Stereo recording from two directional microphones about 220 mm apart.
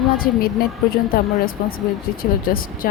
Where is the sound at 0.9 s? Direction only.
40° left (ahead or behind).